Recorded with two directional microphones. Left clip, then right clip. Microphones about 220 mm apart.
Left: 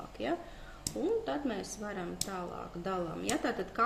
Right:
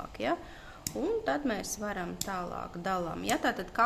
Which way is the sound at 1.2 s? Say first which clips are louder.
Right 4 dB; 45° right (ahead or behind).